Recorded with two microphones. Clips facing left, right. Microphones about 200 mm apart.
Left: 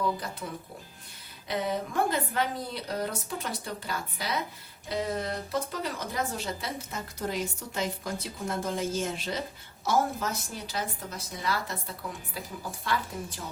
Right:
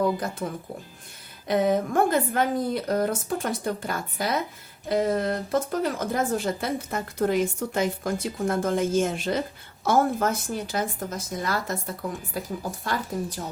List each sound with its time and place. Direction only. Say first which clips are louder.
0.0 s speech: right 6 dB; 45° right (ahead or behind)
1.5 s speech: right 8 dB; 50° right (ahead or behind)